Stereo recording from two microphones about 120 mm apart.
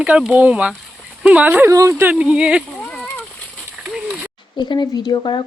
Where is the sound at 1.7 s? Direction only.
25° right (ahead or behind).